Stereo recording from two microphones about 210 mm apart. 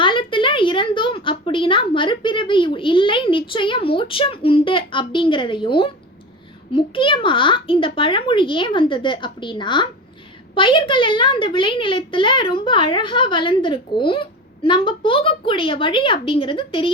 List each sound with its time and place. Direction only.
0.0 s a woman's voice: 25° left (ahead or behind)